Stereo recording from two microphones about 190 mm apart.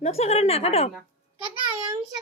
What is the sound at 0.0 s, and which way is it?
Speech, 35° left (ahead or behind).